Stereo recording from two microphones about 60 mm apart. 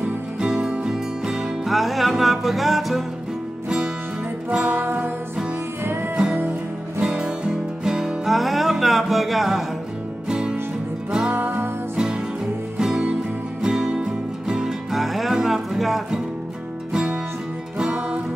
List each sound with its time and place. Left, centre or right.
0.4 s music: centre
3.6 s music: centre
4.7 s music: right
6.1 s music: centre
10.2 s music: centre
11.2 s music: right
12.7 s music: centre